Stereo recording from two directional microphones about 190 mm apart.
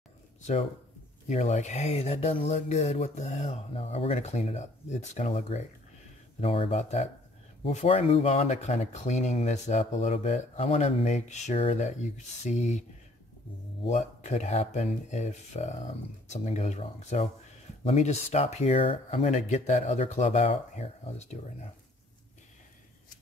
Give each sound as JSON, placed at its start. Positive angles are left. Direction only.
{"t": 1.3, "sound": "speech", "side_deg": 35}
{"t": 13.8, "sound": "speech", "side_deg": 35}